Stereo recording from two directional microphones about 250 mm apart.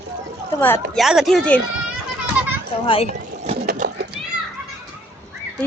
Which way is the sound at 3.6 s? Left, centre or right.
Right.